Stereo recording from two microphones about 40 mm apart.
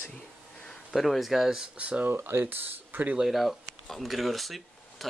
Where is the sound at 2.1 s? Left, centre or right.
Right.